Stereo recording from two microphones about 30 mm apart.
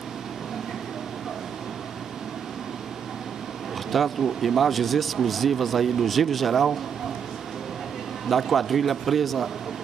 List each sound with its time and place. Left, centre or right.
3.9 s speech: centre
8.3 s speech: centre